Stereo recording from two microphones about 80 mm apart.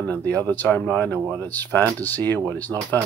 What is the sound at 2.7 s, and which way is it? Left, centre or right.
Speech, centre.